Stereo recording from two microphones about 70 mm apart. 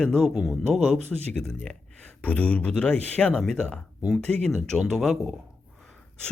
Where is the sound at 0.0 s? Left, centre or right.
Centre.